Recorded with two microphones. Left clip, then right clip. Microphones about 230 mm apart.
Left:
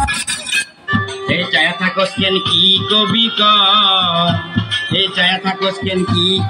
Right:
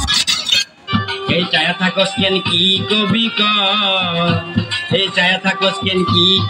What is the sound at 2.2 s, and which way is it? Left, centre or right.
Music, right.